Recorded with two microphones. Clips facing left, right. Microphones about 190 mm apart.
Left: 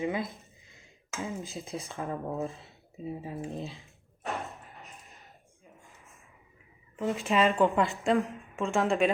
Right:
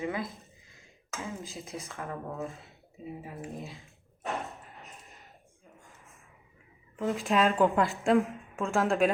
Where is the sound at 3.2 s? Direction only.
30° left (ahead or behind).